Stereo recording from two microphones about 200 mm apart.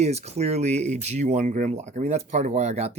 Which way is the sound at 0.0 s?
35° right (ahead or behind).